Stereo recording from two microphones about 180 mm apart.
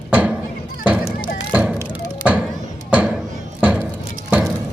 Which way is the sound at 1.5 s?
5° right (ahead or behind).